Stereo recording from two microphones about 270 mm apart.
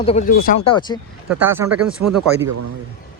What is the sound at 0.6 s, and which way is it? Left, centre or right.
Speech, centre.